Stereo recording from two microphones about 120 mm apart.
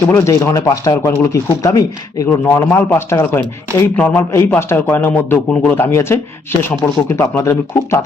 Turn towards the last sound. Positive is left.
turn(degrees=20)  # may be behind; listen again after turning